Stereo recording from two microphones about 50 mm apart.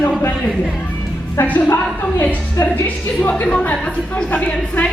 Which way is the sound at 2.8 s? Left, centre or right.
Left.